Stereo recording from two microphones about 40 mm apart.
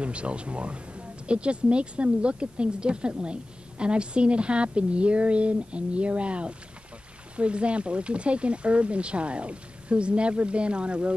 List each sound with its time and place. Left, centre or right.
0.0 s speech: right